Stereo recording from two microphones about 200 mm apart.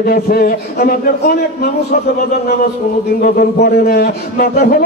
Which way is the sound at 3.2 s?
50° left (ahead or behind).